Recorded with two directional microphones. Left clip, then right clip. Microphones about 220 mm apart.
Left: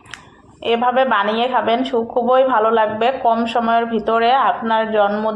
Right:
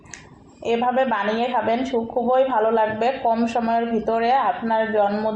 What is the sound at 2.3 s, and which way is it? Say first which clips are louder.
Speech: left 4 dB; 45° left (ahead or behind).